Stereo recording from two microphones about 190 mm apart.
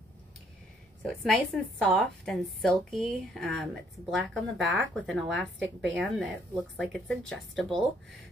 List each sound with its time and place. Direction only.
1.0 s a woman's voice: centre (ahead or behind)